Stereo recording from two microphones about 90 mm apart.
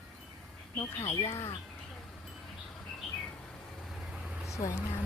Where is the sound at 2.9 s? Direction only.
10° left (ahead or behind).